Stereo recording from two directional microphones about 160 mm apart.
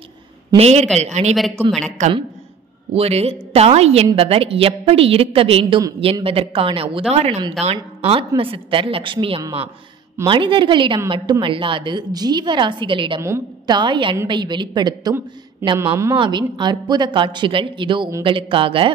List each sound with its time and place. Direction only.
0.6 s a woman's voice: 40° right (ahead or behind)
13.2 s a woman's voice: 15° right (ahead or behind)
13.7 s a woman's voice: 30° right (ahead or behind)